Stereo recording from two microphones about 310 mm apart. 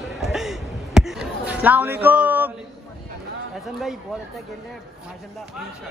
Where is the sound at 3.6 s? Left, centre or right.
Centre.